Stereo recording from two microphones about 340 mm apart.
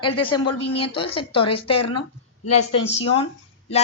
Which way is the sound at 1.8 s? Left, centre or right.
Left.